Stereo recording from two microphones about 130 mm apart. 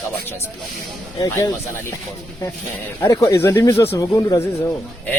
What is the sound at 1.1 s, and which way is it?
Speech, 25° left (ahead or behind).